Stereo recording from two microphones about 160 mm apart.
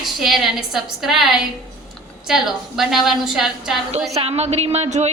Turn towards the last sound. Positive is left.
turn(degrees=-45)  # may be behind; listen again after turning